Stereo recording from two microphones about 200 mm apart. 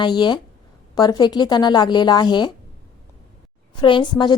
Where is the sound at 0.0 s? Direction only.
20° left (ahead or behind).